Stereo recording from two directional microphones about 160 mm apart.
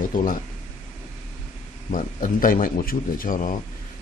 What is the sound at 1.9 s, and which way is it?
Speech, 60° left (ahead or behind).